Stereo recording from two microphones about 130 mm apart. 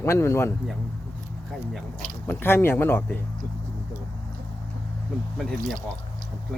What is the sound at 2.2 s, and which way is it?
Speech, 15° left (ahead or behind).